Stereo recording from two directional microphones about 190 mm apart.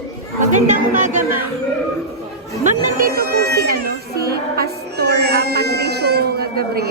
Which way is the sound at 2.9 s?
50° right (ahead or behind).